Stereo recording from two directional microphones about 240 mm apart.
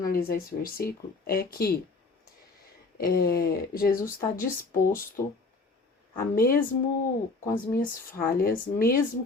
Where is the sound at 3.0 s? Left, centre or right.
Left.